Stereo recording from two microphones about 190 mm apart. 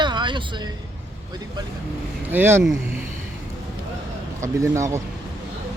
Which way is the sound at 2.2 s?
10° right (ahead or behind).